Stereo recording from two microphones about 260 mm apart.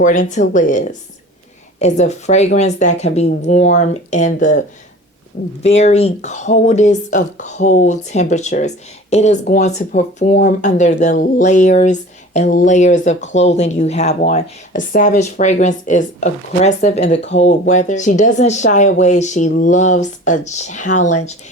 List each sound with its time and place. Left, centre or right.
0.0 s speech: left
5.6 s speech: left